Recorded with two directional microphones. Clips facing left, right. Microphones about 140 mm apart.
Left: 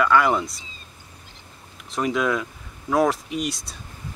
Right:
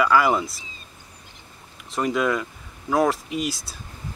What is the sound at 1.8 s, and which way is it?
Speech, centre (ahead or behind).